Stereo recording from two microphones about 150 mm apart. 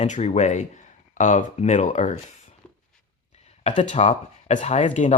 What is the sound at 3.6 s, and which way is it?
Speech, 50° left (ahead or behind).